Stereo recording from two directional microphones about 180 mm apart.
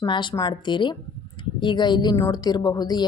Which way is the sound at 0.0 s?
25° left (ahead or behind).